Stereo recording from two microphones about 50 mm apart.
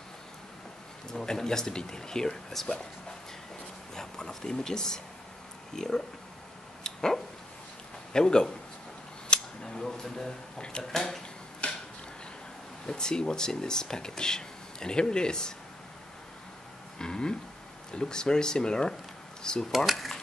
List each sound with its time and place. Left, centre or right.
1.1 s speech: centre
3.9 s speech: centre
6.8 s dog: centre
8.1 s speech: centre
9.3 s a sound: centre
10.8 s speech: centre
11.6 s a sound: left
12.8 s speech: centre
17.0 s speech: centre